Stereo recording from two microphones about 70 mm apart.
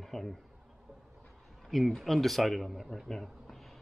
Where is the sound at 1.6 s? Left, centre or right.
Centre.